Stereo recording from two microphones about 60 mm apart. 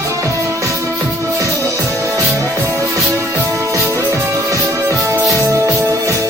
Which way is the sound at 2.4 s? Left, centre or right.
Right.